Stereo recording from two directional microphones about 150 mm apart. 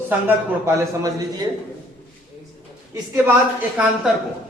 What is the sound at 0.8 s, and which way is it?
Mantra, 25° right (ahead or behind).